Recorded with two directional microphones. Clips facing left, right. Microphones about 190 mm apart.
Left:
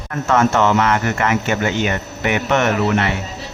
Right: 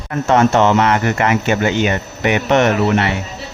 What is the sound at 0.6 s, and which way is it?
Speech, 20° right (ahead or behind).